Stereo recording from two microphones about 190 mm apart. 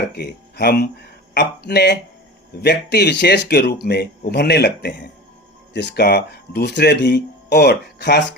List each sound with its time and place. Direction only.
0.1 s speech: 60° left (ahead or behind)